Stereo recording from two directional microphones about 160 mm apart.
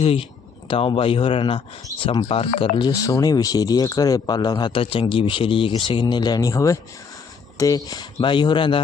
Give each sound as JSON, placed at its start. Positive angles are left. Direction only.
{"t": 0.0, "sound": "a man's voice", "side_deg": 35}
{"t": 7.9, "sound": "speech", "side_deg": 30}